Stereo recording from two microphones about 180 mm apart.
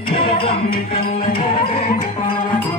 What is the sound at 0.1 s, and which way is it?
Music, 30° left (ahead or behind).